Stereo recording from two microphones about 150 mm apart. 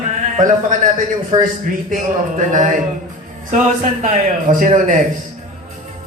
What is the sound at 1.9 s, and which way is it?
A man's voice, 55° right (ahead or behind).